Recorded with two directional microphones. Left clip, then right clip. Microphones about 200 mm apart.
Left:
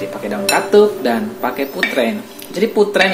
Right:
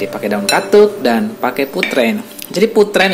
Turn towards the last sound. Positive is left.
turn(degrees=-30)  # may be behind; listen again after turning